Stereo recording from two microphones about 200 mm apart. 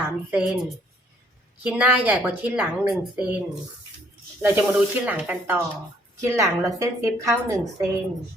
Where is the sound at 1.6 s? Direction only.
5° right (ahead or behind).